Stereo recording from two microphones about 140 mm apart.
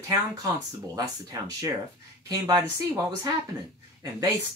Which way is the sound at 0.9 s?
25° right (ahead or behind).